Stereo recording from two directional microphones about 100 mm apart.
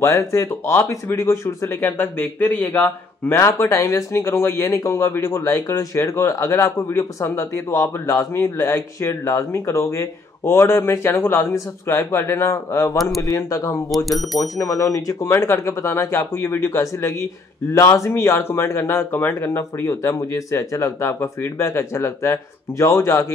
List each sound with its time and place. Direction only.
0.0 s speech: 30° left (ahead or behind)
12.9 s speech: centre (ahead or behind)
13.2 s speech: 30° left (ahead or behind)
13.8 s speech: centre (ahead or behind)
14.4 s speech: 30° left (ahead or behind)